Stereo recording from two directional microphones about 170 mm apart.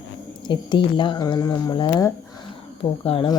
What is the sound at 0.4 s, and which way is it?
Speech, 30° left (ahead or behind).